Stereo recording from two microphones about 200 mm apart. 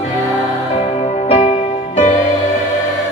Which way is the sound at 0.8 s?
30° left (ahead or behind).